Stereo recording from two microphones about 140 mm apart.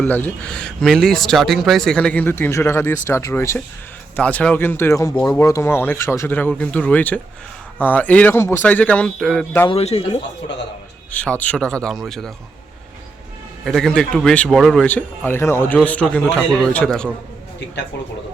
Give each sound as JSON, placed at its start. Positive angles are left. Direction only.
{"t": 0.0, "sound": "speech", "side_deg": 10}
{"t": 4.2, "sound": "speech", "side_deg": 10}
{"t": 9.6, "sound": "a man's voice", "side_deg": 45}
{"t": 11.1, "sound": "speech", "side_deg": 10}
{"t": 13.7, "sound": "speech", "side_deg": 5}